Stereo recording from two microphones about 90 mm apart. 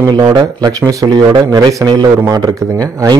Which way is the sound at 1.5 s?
35° right (ahead or behind).